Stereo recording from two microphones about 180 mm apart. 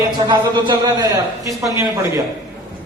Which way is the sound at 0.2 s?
25° right (ahead or behind).